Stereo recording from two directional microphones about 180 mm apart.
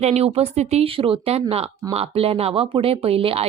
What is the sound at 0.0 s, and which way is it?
A woman's voice, 35° right (ahead or behind).